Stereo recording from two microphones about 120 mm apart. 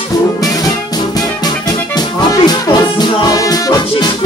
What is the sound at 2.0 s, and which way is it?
Music, 35° left (ahead or behind).